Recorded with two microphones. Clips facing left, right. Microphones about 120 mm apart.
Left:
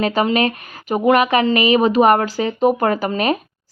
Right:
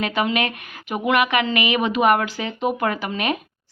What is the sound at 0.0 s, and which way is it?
A woman's voice, 35° left (ahead or behind).